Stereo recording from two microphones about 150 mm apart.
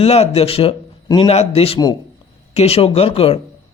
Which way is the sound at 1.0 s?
25° left (ahead or behind).